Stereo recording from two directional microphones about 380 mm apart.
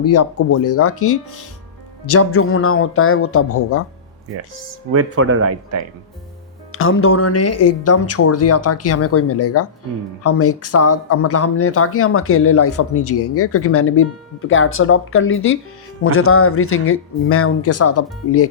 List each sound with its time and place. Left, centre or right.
0.0 s speech: left
4.9 s speech: right
6.7 s speech: left